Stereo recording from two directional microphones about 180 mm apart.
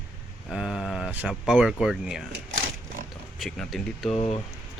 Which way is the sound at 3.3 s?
Centre (ahead or behind).